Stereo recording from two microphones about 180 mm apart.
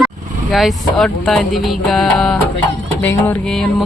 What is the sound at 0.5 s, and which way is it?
A woman's voice, centre (ahead or behind).